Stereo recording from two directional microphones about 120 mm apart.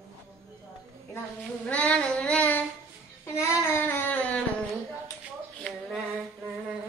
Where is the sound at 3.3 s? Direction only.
20° left (ahead or behind).